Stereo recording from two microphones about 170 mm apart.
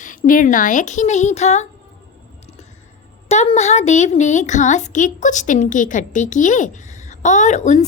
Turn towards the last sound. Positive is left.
turn(degrees=45)  # may be behind; listen again after turning